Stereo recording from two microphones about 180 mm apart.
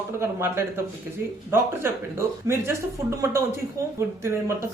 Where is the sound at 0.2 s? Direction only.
15° right (ahead or behind).